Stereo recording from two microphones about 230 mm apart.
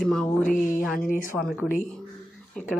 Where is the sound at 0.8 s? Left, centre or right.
Centre.